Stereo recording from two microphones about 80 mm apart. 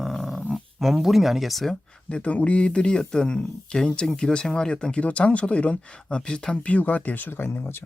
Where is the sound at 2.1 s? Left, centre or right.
Centre.